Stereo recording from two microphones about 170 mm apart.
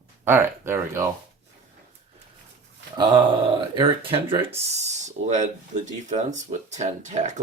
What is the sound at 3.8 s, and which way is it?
Speech, 30° right (ahead or behind).